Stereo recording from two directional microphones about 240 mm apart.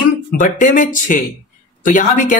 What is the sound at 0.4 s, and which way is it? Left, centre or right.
Speech, left.